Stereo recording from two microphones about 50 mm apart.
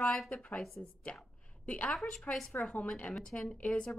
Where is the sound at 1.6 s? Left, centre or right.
Left.